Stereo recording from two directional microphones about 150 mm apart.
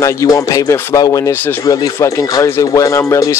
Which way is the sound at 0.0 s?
20° left (ahead or behind).